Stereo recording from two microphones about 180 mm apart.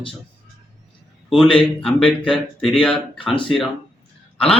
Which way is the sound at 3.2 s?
30° left (ahead or behind).